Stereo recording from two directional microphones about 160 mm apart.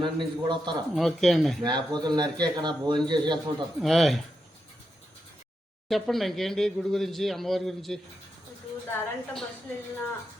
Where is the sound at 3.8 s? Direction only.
Centre (ahead or behind).